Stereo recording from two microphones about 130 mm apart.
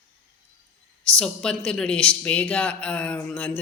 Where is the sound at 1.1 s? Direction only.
5° left (ahead or behind).